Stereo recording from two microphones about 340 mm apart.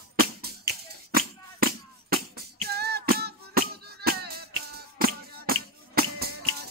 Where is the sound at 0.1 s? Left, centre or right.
Right.